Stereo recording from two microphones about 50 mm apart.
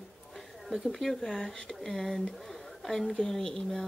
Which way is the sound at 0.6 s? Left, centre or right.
Centre.